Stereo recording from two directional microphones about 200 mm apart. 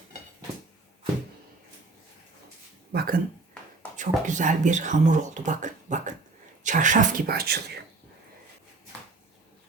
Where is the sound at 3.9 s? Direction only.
40° right (ahead or behind).